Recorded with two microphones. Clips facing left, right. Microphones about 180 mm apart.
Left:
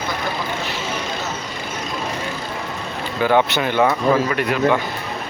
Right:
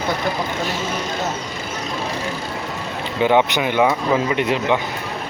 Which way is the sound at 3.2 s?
20° right (ahead or behind).